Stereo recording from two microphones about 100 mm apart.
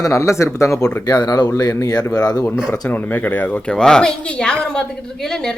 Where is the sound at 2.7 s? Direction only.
20° left (ahead or behind).